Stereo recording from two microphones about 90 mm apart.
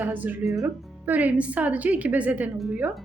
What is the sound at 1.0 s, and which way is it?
A woman's voice, 20° right (ahead or behind).